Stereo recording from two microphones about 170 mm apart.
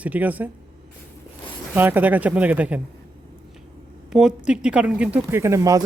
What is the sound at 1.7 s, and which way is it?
Speech, 10° right (ahead or behind).